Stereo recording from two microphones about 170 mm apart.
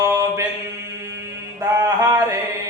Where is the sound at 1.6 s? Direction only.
20° right (ahead or behind).